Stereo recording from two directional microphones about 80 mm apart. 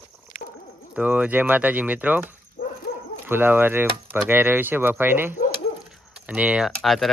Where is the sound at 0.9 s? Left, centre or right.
Centre.